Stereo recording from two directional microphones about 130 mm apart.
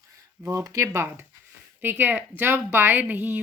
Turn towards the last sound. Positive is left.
turn(degrees=-15)  # may be behind; listen again after turning